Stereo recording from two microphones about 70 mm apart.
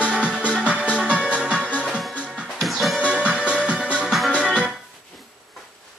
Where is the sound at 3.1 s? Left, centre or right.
Centre.